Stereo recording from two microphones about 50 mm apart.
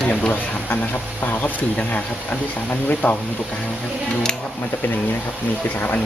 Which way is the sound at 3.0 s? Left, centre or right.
Left.